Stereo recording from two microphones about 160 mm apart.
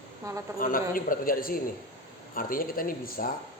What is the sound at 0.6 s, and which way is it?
A man's voice, 60° left (ahead or behind).